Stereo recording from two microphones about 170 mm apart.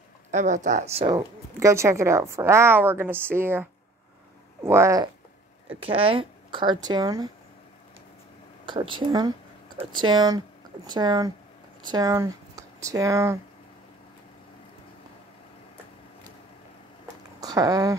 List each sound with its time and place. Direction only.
0.3 s speech: 45° right (ahead or behind)
1.1 s a woman's voice: 15° right (ahead or behind)
4.6 s a woman's voice: 15° right (ahead or behind)
5.8 s speech: 35° right (ahead or behind)
8.6 s speech: 30° right (ahead or behind)
17.4 s speech: 20° right (ahead or behind)